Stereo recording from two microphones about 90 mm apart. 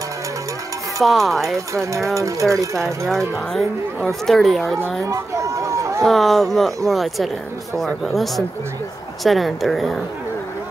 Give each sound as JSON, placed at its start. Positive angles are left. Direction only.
{"t": 1.0, "sound": "speech", "side_deg": 0}
{"t": 1.7, "sound": "speech", "side_deg": -35}
{"t": 3.5, "sound": "speech", "side_deg": 5}
{"t": 5.0, "sound": "speech", "side_deg": -35}
{"t": 6.0, "sound": "speech", "side_deg": 0}